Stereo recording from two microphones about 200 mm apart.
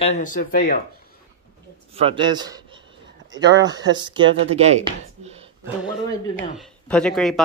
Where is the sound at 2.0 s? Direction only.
25° right (ahead or behind).